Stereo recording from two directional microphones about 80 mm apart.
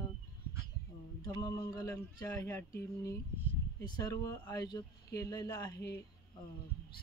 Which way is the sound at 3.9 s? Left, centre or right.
Left.